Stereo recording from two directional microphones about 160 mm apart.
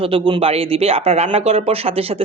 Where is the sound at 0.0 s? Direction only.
35° right (ahead or behind).